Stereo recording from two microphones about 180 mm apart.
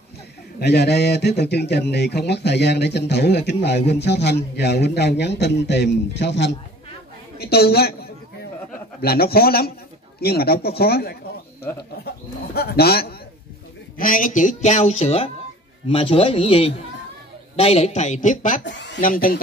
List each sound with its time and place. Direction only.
0.6 s speech: 65° left (ahead or behind)
7.3 s a woman's voice: 60° left (ahead or behind)
12.5 s speech: 60° left (ahead or behind)
13.9 s speech: 50° left (ahead or behind)
18.6 s speech: 80° left
18.9 s speech: 50° left (ahead or behind)